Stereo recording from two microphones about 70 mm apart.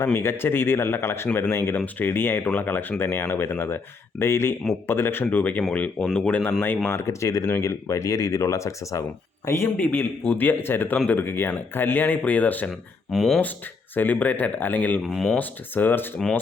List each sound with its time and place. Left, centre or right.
0.1 s speech: left
6.6 s speech: left
9.7 s speech: left
10.9 s speech: centre
11.2 s speech: left
13.1 s speech: centre
13.9 s speech: left
15.0 s speech: centre
15.4 s speech: left